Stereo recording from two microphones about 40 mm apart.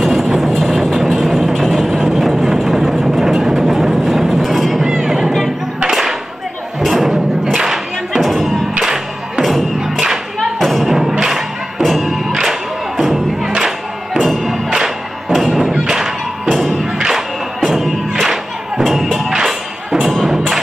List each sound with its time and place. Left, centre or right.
0.0 s music: centre
1.9 s vehicle: centre
4.8 s music: centre
6.8 s thump: centre
8.8 s music: centre
9.8 s thump: centre
10.6 s music: centre
14.2 s music: centre
14.7 s music: centre
15.3 s thump: centre
15.8 s music: centre